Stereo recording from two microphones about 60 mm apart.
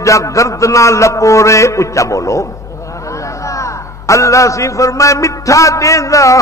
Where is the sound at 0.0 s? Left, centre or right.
Left.